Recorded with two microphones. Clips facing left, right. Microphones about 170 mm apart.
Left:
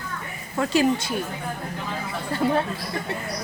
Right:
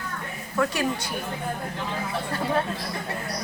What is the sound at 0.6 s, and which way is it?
Speech, 25° left (ahead or behind).